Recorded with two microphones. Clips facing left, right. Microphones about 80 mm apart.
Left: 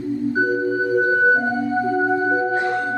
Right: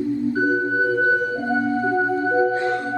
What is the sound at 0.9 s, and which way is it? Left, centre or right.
Music, left.